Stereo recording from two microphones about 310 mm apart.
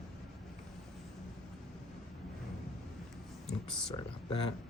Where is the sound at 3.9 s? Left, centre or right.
Centre.